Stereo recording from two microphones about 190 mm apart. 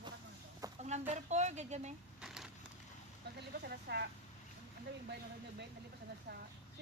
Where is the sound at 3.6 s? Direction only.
60° right (ahead or behind).